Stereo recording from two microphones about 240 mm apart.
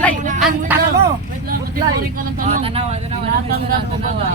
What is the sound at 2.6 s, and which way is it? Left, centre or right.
Speech, right.